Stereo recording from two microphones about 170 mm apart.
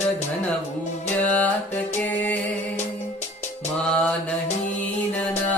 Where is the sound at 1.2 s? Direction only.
10° left (ahead or behind).